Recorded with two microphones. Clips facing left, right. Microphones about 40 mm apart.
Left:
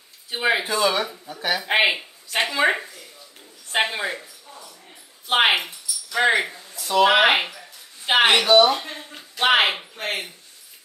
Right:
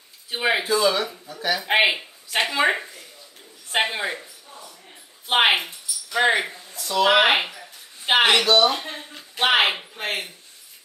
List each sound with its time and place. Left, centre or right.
0.3 s speech: centre
0.7 s speech: left
1.6 s speech: centre
3.7 s speech: centre
5.4 s speech: centre
6.8 s speech: left
7.1 s speech: centre
8.1 s speech: centre
8.5 s speech: left
9.4 s speech: centre